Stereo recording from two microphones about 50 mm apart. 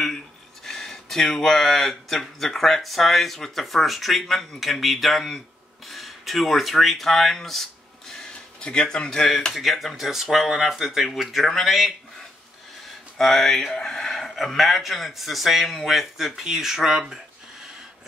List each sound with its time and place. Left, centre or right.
0.7 s speech: centre
8.5 s speech: centre
9.5 s speech: centre
13.2 s speech: centre